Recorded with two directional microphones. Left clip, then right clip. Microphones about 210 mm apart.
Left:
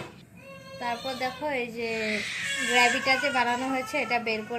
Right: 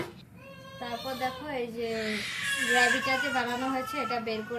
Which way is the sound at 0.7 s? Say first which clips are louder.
Left 4 dB; 10° left (ahead or behind).